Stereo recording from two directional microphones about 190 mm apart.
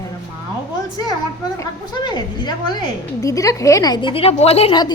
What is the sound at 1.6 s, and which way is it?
A woman's voice, 25° left (ahead or behind).